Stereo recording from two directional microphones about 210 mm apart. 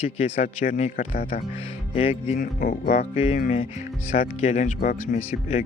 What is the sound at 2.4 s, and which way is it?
Speech, 40° left (ahead or behind).